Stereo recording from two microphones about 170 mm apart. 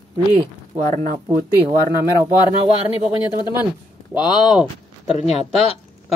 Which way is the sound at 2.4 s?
35° left (ahead or behind).